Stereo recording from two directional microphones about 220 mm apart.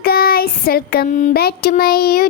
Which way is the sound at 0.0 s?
45° left (ahead or behind).